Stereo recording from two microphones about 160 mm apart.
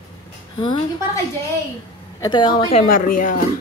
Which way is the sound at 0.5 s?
30° left (ahead or behind).